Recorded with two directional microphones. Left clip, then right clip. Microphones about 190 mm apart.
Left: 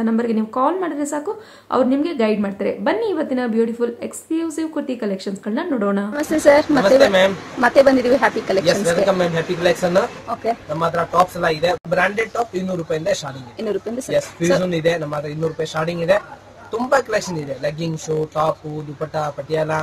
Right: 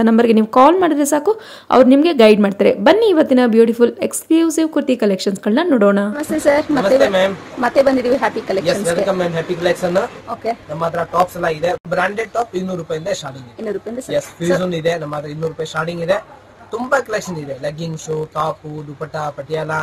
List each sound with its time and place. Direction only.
0.0 s a woman's voice: 45° right (ahead or behind)
6.1 s a woman's voice: centre (ahead or behind)